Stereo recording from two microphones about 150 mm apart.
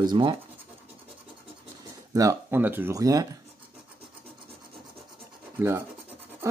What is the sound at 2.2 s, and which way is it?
A man's voice, 15° right (ahead or behind).